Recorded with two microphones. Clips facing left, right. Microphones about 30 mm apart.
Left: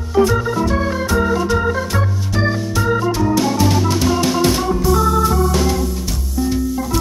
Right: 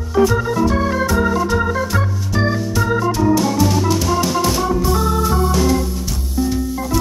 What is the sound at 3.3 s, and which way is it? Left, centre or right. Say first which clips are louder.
Music: even; centre.